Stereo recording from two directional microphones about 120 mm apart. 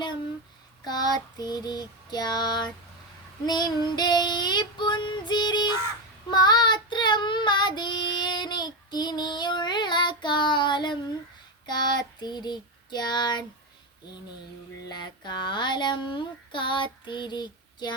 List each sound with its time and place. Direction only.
0.9 s child singing: 35° left (ahead or behind)
14.8 s child singing: 35° left (ahead or behind)